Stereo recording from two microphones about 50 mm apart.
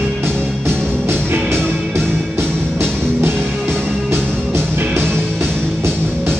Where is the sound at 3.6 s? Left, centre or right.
Centre.